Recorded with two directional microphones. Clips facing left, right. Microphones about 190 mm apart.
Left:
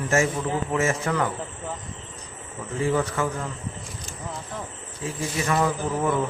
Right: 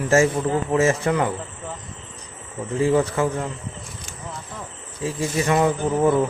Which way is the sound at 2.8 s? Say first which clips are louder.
Right 5 dB; 30° right (ahead or behind).